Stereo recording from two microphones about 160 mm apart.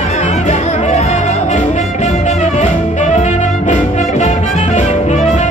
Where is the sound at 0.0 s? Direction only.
45° left (ahead or behind).